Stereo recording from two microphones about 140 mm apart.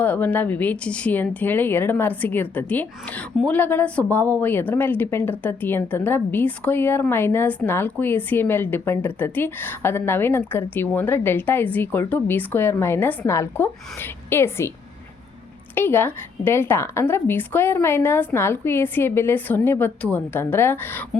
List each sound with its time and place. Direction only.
0.0 s speech: 15° left (ahead or behind)
15.7 s speech: 15° left (ahead or behind)